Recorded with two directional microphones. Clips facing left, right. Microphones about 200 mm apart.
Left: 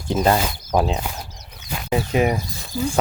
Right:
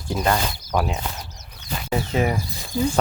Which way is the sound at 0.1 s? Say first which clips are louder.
Left 4 dB; 25° left (ahead or behind).